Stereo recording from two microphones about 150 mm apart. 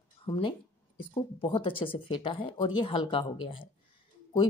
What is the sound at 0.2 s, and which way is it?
A woman's voice, 35° left (ahead or behind).